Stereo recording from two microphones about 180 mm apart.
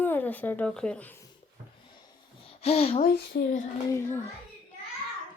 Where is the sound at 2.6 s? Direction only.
35° left (ahead or behind).